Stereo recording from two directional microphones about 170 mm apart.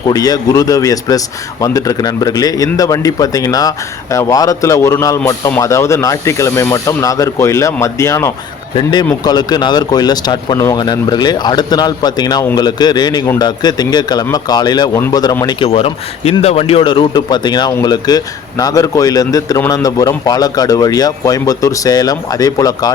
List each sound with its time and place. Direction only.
0.1 s a man's voice: 20° left (ahead or behind)
8.7 s a man's voice: 25° left (ahead or behind)